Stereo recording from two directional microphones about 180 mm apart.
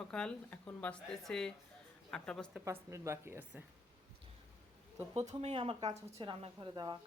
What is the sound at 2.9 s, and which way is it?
Speech, 15° right (ahead or behind).